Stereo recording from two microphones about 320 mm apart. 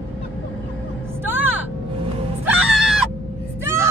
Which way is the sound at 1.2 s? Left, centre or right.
Centre.